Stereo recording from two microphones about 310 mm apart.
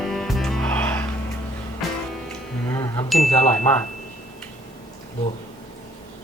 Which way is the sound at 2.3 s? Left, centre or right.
Centre.